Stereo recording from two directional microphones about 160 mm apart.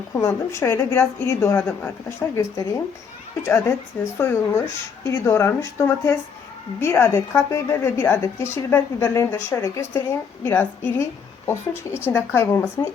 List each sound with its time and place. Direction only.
0.1 s a woman's voice: 20° left (ahead or behind)
12.0 s a woman's voice: 15° left (ahead or behind)